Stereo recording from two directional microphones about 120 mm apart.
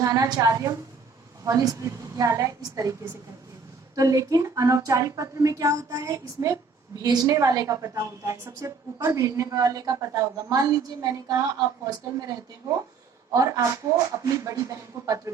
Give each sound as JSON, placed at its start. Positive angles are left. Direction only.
{"t": 0.0, "sound": "a woman's voice", "side_deg": -30}
{"t": 3.9, "sound": "a woman's voice", "side_deg": -30}
{"t": 13.3, "sound": "speech", "side_deg": -30}